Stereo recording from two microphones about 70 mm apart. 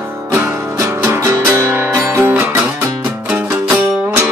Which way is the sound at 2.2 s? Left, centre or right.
Right.